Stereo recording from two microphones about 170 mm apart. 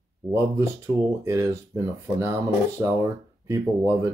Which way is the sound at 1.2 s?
15° right (ahead or behind).